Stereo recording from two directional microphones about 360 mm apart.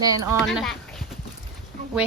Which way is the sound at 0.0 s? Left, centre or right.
Centre.